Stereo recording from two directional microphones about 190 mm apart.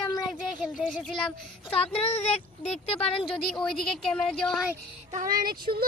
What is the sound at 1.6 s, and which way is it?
Speech, 30° left (ahead or behind).